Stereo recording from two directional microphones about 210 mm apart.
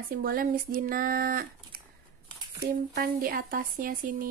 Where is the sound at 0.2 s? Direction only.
45° right (ahead or behind).